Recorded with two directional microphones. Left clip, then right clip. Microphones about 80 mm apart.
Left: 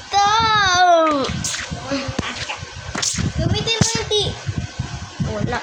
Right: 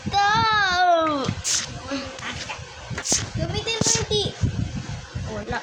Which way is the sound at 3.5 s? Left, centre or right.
Right.